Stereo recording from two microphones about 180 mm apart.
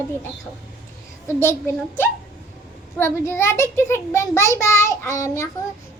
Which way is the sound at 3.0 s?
15° left (ahead or behind).